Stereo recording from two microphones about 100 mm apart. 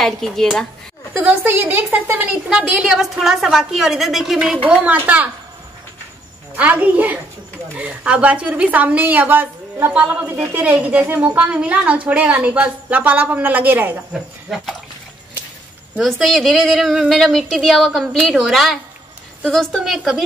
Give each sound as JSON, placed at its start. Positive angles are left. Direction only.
{"t": 0.0, "sound": "speech", "side_deg": 5}
{"t": 1.1, "sound": "a woman's voice", "side_deg": -20}
{"t": 2.5, "sound": "a woman's voice", "side_deg": -5}
{"t": 6.5, "sound": "a woman's voice", "side_deg": -15}
{"t": 14.1, "sound": "speech", "side_deg": -5}
{"t": 16.0, "sound": "speech", "side_deg": 0}